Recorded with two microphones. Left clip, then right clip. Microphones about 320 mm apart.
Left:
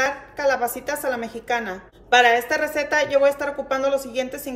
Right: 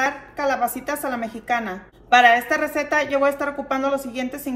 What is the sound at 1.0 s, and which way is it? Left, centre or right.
A woman's voice, centre.